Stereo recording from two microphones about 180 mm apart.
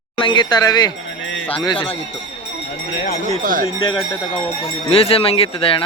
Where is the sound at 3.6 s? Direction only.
25° left (ahead or behind).